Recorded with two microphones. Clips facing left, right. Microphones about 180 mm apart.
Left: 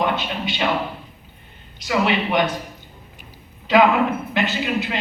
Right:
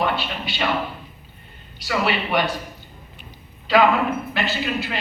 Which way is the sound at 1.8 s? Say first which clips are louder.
Left 3 dB; 20° left (ahead or behind).